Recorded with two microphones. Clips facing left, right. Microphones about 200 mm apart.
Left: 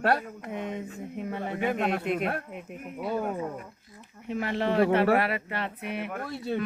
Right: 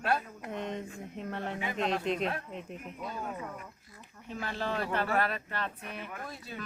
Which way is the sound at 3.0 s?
60° left (ahead or behind).